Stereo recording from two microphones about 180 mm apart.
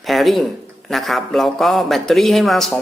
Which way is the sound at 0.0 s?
Centre (ahead or behind).